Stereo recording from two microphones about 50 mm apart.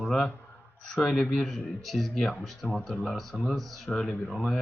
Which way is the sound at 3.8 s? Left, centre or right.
Centre.